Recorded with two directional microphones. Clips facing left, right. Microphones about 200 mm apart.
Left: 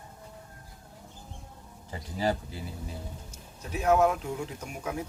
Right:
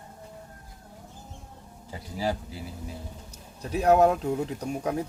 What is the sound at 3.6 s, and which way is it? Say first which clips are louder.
Speech: right 4 dB; 35° right (ahead or behind).